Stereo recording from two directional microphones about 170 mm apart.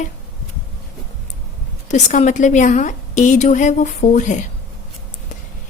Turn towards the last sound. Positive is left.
turn(degrees=45)  # may be behind; listen again after turning